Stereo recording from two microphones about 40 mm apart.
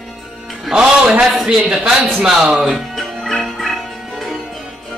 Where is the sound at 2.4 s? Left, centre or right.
Centre.